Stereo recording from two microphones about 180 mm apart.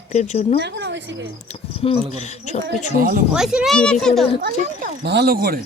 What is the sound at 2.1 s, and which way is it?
Speech, 40° left (ahead or behind).